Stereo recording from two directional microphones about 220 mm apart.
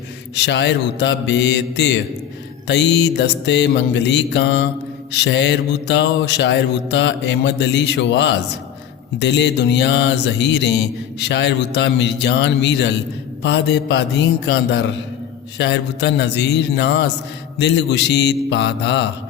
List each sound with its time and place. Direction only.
0.3 s music: 50° left (ahead or behind)